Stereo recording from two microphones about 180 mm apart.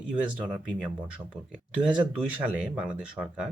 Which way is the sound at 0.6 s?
5° right (ahead or behind).